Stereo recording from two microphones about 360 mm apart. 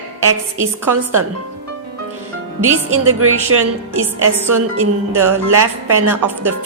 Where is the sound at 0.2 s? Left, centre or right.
Right.